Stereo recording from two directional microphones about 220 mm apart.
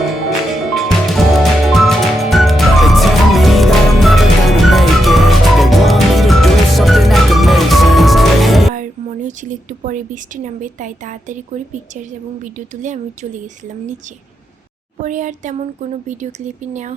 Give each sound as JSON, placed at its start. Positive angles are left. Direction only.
{"t": 0.1, "sound": "music", "side_deg": 0}
{"t": 8.7, "sound": "a woman's voice", "side_deg": -35}
{"t": 15.0, "sound": "a woman's voice", "side_deg": -35}